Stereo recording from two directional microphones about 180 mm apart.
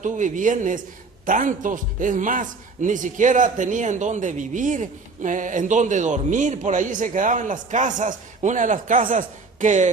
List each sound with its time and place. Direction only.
0.0 s speech: 45° right (ahead or behind)